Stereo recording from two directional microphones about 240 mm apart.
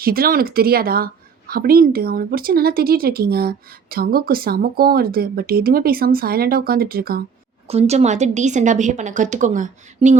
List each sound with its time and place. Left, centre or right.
0.0 s a woman's voice: right
7.7 s a woman's voice: right